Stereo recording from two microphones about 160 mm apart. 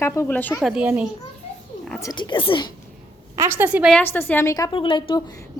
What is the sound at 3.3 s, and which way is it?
Speech, 15° right (ahead or behind).